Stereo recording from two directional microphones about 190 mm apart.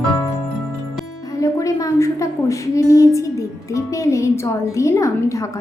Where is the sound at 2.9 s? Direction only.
15° left (ahead or behind).